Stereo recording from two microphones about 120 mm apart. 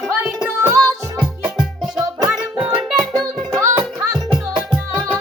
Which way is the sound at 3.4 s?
30° right (ahead or behind).